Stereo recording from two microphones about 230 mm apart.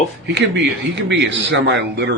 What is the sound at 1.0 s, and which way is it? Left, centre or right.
Speech, right.